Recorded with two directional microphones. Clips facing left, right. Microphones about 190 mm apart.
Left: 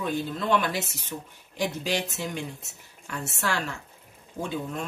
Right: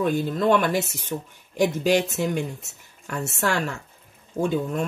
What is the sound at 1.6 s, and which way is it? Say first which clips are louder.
Speech: right 8 dB; 50° right (ahead or behind).